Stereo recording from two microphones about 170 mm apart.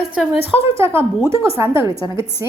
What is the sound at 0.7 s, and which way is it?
A woman's voice, 15° right (ahead or behind).